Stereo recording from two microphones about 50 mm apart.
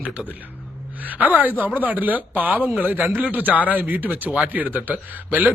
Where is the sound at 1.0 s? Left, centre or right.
Right.